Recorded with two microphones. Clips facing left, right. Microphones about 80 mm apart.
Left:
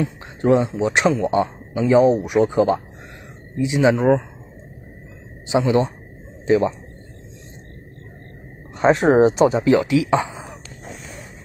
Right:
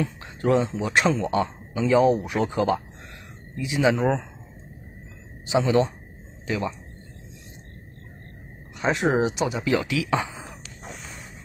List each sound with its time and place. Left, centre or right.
0.0 s a man's voice: left
5.5 s a man's voice: left
8.7 s speech: left